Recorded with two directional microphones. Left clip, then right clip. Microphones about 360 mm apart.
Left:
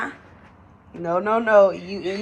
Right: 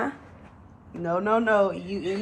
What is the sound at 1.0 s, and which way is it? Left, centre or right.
Speech, centre.